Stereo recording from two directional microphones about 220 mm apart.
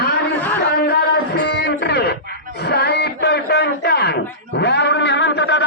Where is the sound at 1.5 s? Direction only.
50° left (ahead or behind).